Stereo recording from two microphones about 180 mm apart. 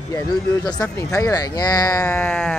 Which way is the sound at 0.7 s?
20° left (ahead or behind).